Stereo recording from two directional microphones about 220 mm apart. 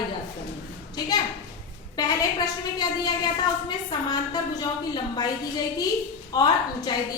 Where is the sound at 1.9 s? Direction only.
20° left (ahead or behind).